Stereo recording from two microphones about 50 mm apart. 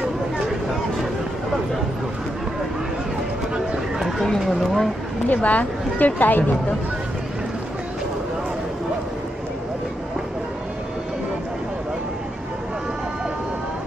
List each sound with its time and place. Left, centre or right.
4.4 s speech: centre
5.3 s speech: left